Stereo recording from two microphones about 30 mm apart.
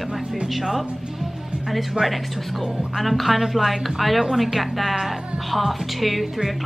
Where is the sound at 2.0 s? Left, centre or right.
Centre.